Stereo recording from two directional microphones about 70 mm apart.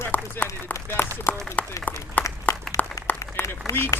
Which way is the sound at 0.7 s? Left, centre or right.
Left.